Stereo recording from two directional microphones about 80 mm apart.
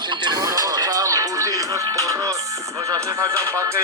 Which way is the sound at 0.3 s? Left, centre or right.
Right.